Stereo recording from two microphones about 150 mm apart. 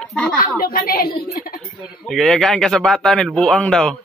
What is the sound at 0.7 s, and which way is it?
Speech, 80° left.